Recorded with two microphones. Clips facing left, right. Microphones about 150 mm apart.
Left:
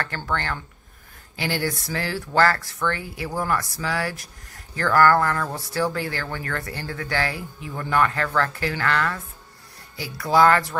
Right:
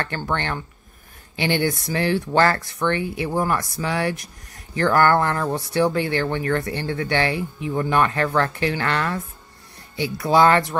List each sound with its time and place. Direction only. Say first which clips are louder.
0.0 s speech: right 2 dB; 20° right (ahead or behind)